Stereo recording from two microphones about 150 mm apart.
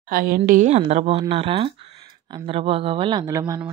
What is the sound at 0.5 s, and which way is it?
A woman's voice, 55° right (ahead or behind).